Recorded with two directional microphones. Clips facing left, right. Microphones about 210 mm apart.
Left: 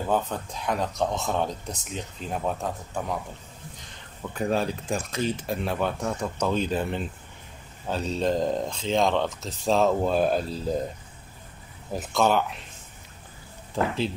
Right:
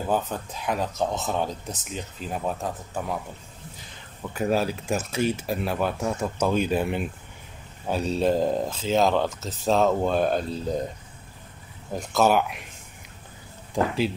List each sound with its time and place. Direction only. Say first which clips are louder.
0.0 s speech: even; 5° right (ahead or behind)
4.2 s speech: right 2 dB; 5° right (ahead or behind)
11.9 s speech: right 2 dB; centre (ahead or behind)
13.8 s speech: right 2 dB; 15° right (ahead or behind)